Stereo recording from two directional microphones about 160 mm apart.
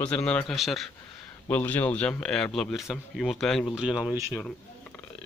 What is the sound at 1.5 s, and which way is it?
Speech, 10° left (ahead or behind).